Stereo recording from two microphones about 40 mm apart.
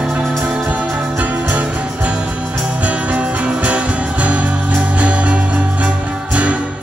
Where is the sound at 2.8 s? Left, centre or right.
Right.